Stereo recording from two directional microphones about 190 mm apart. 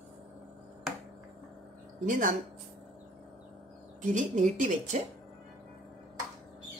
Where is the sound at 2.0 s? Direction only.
45° right (ahead or behind).